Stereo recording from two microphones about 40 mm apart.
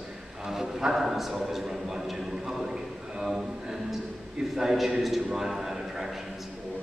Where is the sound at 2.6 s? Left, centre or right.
Centre.